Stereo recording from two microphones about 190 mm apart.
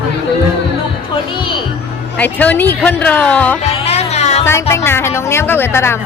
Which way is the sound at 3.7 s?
35° left (ahead or behind).